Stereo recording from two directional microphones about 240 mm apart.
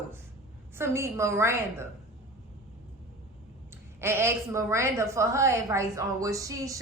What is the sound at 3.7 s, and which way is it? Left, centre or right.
A woman's voice, centre.